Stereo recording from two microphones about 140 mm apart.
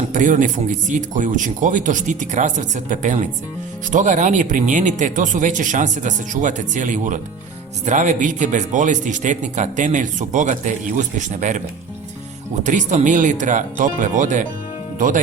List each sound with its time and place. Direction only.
0.1 s speech: 70° right (ahead or behind)
12.6 s speech: 60° right (ahead or behind)